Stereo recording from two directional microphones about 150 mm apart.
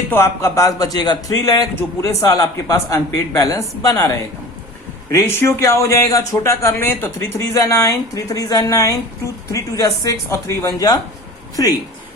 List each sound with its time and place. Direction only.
0.1 s a man's voice: 20° left (ahead or behind)
5.2 s a man's voice: 15° left (ahead or behind)